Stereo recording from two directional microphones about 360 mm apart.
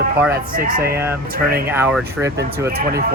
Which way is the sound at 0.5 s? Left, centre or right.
Right.